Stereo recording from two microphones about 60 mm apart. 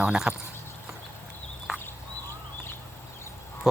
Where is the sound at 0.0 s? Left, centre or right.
Centre.